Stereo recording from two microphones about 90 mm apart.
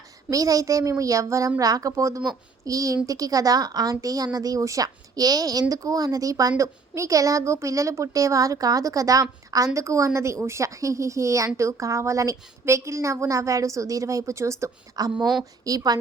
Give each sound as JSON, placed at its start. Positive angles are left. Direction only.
{"t": 0.3, "sound": "a woman's voice", "side_deg": -40}
{"t": 15.0, "sound": "a woman's voice", "side_deg": -50}